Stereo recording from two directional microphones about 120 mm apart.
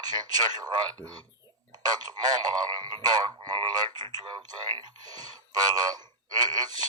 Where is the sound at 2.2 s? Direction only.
35° right (ahead or behind).